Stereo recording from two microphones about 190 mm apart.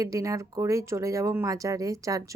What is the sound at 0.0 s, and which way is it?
Speech, 15° right (ahead or behind).